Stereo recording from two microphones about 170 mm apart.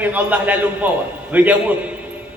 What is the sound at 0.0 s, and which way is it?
A man's voice, 10° right (ahead or behind).